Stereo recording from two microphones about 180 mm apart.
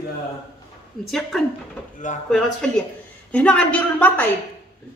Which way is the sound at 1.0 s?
Centre (ahead or behind).